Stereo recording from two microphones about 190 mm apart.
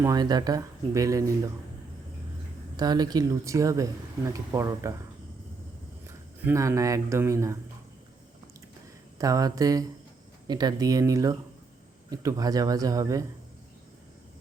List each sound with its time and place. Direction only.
0.0 s speech: 20° right (ahead or behind)
2.7 s speech: 20° right (ahead or behind)
6.1 s speech: 15° right (ahead or behind)
9.1 s speech: 20° right (ahead or behind)